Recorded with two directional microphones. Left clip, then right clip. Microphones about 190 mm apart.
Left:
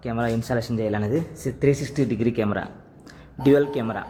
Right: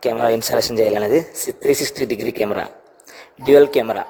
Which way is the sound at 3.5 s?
35° right (ahead or behind).